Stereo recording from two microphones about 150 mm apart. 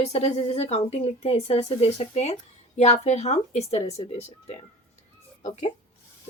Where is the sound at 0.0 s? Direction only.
45° left (ahead or behind).